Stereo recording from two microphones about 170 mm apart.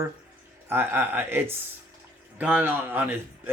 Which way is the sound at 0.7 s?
15° right (ahead or behind).